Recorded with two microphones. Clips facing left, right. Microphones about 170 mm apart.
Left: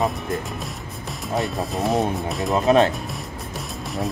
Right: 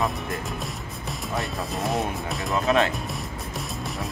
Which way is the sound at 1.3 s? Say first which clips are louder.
Left 6 dB; centre (ahead or behind).